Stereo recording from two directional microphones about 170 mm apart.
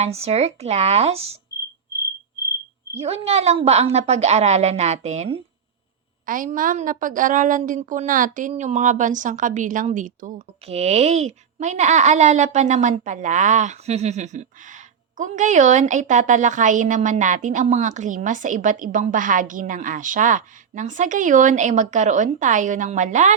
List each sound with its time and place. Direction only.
0.0 s a woman's voice: 40° right (ahead or behind)
3.0 s a woman's voice: 35° right (ahead or behind)
6.2 s a woman's voice: 50° right (ahead or behind)